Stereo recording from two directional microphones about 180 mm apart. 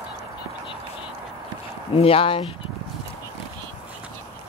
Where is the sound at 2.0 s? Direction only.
30° left (ahead or behind).